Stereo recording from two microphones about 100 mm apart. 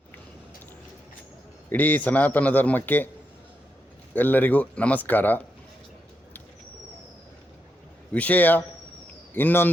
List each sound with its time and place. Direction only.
1.7 s a man's voice: 15° left (ahead or behind)
4.1 s a man's voice: 20° left (ahead or behind)
8.1 s a man's voice: 15° left (ahead or behind)